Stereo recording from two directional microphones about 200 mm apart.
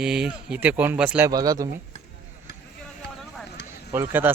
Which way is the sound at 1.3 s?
20° right (ahead or behind).